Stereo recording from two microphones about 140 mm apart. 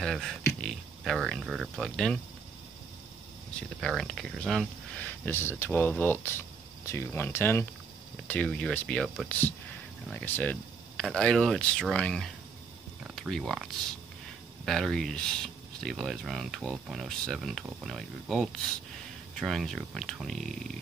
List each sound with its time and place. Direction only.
0.0 s speech: centre (ahead or behind)
3.8 s speech: 5° left (ahead or behind)